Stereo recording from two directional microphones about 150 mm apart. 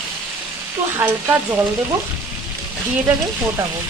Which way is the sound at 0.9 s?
15° right (ahead or behind).